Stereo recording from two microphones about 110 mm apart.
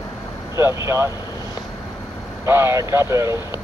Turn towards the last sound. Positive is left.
turn(degrees=-25)  # may be behind; listen again after turning